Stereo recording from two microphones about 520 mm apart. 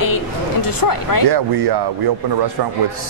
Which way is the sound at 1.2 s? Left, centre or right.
Right.